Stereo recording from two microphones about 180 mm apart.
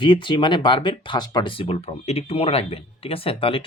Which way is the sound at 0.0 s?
25° left (ahead or behind).